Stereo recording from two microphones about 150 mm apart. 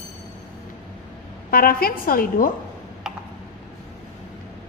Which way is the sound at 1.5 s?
80° left.